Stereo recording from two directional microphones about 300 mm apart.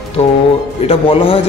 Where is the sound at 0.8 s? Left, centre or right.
Centre.